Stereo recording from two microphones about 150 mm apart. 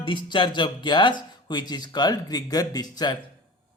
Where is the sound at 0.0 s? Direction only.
30° left (ahead or behind).